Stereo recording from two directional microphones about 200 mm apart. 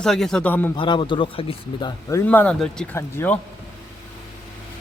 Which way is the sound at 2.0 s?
10° left (ahead or behind).